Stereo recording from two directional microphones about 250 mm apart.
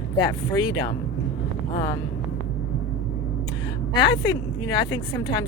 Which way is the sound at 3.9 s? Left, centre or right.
Centre.